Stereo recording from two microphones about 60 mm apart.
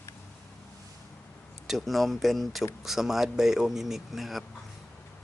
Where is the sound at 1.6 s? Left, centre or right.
Centre.